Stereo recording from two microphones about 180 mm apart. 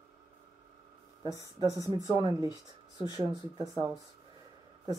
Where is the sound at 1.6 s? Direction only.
20° right (ahead or behind).